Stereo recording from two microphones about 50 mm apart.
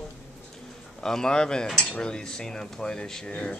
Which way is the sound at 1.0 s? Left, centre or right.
Centre.